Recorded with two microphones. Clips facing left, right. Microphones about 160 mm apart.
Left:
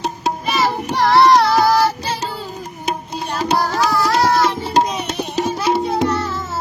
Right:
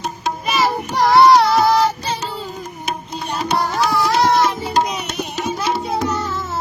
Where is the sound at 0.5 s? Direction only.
5° right (ahead or behind).